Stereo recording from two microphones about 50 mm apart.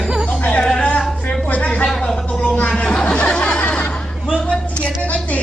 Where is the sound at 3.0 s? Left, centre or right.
Left.